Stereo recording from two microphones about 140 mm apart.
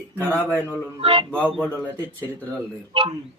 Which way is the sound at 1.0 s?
40° right (ahead or behind).